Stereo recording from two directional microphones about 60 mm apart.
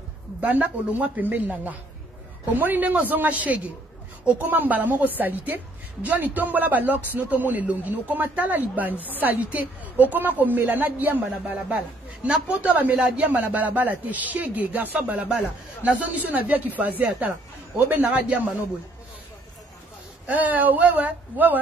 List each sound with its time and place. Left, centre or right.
0.4 s a woman's voice: right
8.9 s speech: left
9.2 s a woman's voice: right
12.3 s a woman's voice: right
20.2 s speech: right